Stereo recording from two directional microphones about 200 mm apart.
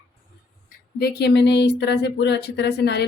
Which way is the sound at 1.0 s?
55° left (ahead or behind).